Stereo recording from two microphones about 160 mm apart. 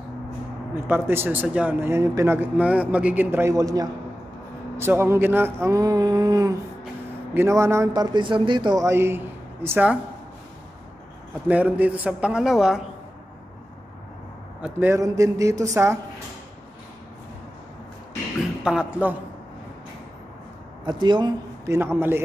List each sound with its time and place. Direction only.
0.8 s a man's voice: 15° right (ahead or behind)
11.4 s speech: 10° right (ahead or behind)
14.6 s a man's voice: 15° right (ahead or behind)
18.6 s speech: 5° right (ahead or behind)
20.8 s speech: 30° right (ahead or behind)
21.7 s speech: 15° right (ahead or behind)